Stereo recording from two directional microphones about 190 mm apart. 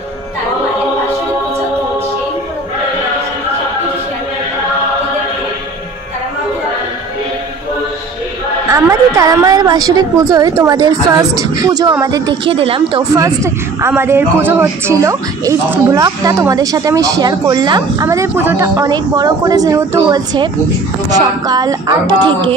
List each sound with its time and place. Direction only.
8.7 s a woman's voice: 15° right (ahead or behind)
13.1 s a woman's voice: 15° right (ahead or behind)